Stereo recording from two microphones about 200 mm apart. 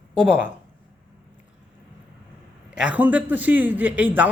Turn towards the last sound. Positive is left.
turn(degrees=-10)  # may be behind; listen again after turning